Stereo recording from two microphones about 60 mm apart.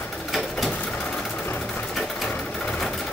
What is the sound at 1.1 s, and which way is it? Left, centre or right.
Sewing machine, centre.